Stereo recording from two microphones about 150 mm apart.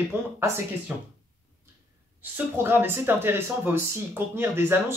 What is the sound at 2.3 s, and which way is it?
Speech, 15° right (ahead or behind).